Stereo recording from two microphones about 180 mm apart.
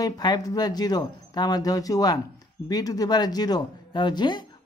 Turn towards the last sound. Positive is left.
turn(degrees=25)  # may be behind; listen again after turning